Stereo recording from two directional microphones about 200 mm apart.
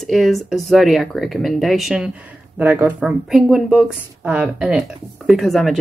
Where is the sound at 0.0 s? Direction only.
Centre (ahead or behind).